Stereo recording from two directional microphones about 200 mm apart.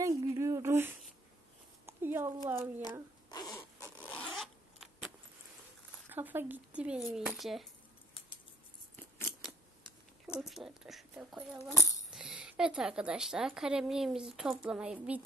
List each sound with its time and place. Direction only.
0.0 s a sound: 15° right (ahead or behind)
3.3 s a sound: 20° left (ahead or behind)
4.0 s zipper: 5° left (ahead or behind)
6.0 s speech: 10° right (ahead or behind)
10.4 s a woman's voice: centre (ahead or behind)
11.7 s speech: 15° left (ahead or behind)
12.1 s a woman's voice: 5° right (ahead or behind)